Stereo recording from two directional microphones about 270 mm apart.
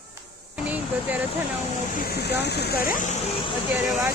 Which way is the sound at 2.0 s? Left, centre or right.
Left.